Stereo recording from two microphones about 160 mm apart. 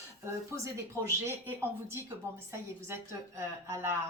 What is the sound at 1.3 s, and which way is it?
Speech, 15° right (ahead or behind).